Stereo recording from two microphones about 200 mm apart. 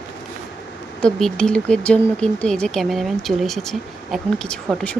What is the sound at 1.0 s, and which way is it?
Speech, 5° left (ahead or behind).